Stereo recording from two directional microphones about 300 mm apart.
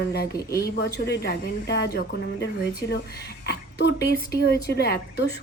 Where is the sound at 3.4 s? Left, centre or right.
Left.